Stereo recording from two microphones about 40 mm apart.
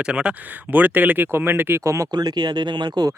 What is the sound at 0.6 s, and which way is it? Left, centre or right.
Speech, right.